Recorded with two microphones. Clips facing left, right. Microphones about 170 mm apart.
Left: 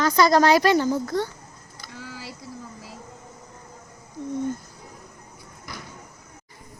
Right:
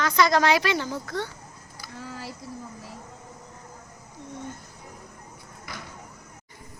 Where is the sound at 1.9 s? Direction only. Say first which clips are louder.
Right 1 dB; 90° left.